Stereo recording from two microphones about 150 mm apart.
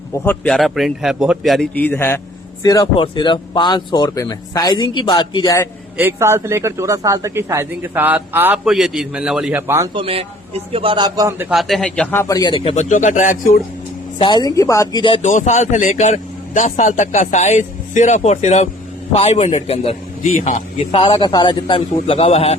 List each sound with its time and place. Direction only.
0.1 s a man's voice: 10° left (ahead or behind)
1.7 s a man's voice: 10° left (ahead or behind)
2.6 s speech: 25° left (ahead or behind)
6.0 s speech: 15° right (ahead or behind)
8.6 s a man's voice: 5° right (ahead or behind)
9.9 s a man's voice: 35° right (ahead or behind); by 11.4 s 20° right (ahead or behind)
11.4 s a man's voice: centre (ahead or behind)
12.2 s a man's voice: 25° left (ahead or behind); by 13.6 s 65° left (ahead or behind)
14.2 s speech: 30° left (ahead or behind)
15.2 s a man's voice: 55° left (ahead or behind)